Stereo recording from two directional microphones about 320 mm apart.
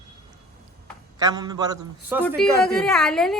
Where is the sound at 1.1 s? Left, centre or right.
Centre.